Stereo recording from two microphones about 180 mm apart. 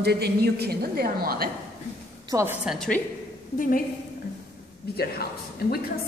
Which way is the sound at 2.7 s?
5° left (ahead or behind).